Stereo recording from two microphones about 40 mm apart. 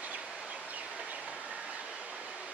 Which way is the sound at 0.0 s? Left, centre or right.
Right.